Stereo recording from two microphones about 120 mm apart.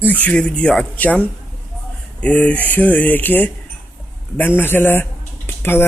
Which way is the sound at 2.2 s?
10° left (ahead or behind).